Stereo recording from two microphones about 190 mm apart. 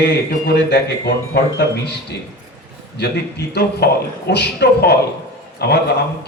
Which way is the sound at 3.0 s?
60° left (ahead or behind).